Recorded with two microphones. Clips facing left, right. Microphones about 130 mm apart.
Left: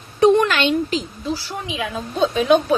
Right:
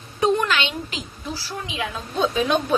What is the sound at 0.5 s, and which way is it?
Speech, 45° left (ahead or behind).